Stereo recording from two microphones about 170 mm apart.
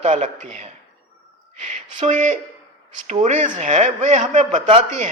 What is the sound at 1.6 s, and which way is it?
A woman's voice, 40° right (ahead or behind).